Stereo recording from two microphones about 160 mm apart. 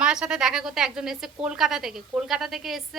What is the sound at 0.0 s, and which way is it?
A woman's voice, 5° right (ahead or behind).